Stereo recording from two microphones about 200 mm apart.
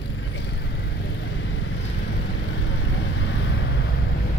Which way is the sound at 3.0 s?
65° left (ahead or behind).